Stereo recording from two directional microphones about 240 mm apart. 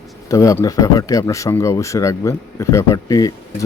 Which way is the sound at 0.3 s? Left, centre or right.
Centre.